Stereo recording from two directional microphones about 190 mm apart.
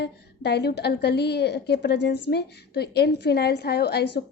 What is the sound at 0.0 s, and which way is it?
A woman's voice, 60° left (ahead or behind).